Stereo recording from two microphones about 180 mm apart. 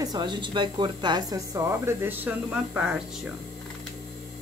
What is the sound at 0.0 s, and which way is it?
A woman's voice, 25° right (ahead or behind).